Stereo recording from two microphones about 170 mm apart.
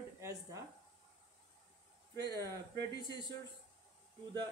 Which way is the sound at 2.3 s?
20° right (ahead or behind).